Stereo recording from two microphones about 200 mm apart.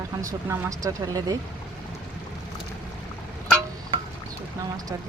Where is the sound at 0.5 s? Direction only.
15° right (ahead or behind).